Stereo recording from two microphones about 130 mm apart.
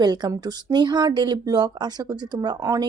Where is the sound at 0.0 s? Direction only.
30° right (ahead or behind).